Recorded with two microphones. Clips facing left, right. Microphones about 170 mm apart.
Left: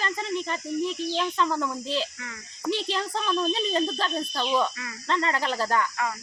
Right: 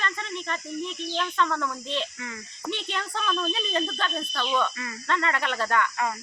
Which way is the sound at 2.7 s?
30° left (ahead or behind).